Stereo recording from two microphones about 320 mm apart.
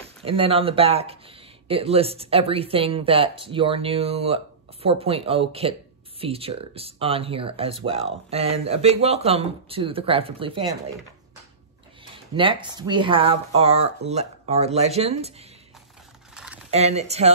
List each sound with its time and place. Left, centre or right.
0.2 s speech: centre
12.5 s speech: centre
16.7 s speech: centre